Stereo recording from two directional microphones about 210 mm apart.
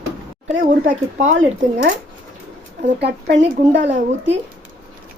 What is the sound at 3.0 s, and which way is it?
Speech, 50° right (ahead or behind).